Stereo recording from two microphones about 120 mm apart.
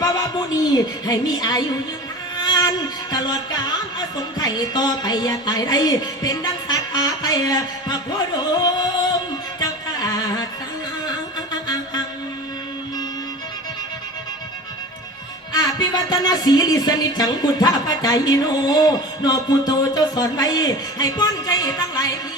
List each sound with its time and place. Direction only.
0.0 s music: 30° left (ahead or behind)
2.4 s speech: 35° left (ahead or behind)
9.6 s music: 30° left (ahead or behind)
15.5 s speech: 35° left (ahead or behind)